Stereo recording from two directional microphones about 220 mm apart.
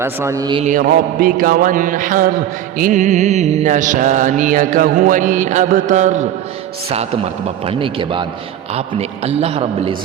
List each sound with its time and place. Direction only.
0.0 s a man's voice: 10° right (ahead or behind)
0.6 s mantra: 40° right (ahead or behind)
7.7 s a man's voice: 25° right (ahead or behind)